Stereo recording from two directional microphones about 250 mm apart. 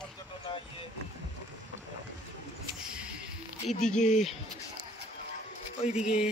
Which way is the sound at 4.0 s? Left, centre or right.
Left.